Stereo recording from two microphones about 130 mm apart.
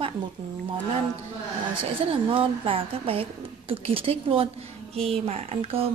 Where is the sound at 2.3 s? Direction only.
45° right (ahead or behind).